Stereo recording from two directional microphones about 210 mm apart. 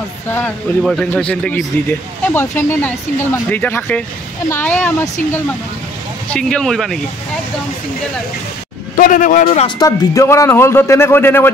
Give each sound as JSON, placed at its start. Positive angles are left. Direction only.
{"t": 0.3, "sound": "speech", "side_deg": 10}
{"t": 6.3, "sound": "speech", "side_deg": 5}
{"t": 8.9, "sound": "speech", "side_deg": 40}
{"t": 9.8, "sound": "speech", "side_deg": 15}